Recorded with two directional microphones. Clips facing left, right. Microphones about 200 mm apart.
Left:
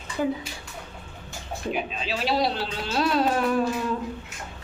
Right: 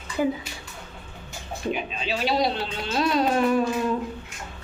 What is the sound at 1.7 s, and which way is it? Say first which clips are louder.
Speech: even; centre (ahead or behind).